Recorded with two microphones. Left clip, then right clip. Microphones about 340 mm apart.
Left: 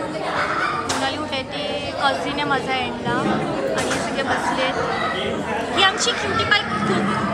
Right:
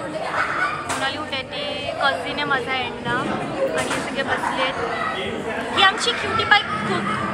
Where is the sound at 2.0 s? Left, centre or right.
Centre.